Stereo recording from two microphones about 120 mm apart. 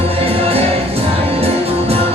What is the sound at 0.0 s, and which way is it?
Music, 55° right (ahead or behind).